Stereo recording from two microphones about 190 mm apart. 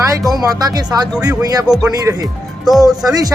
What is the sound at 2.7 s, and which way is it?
Speech, centre (ahead or behind).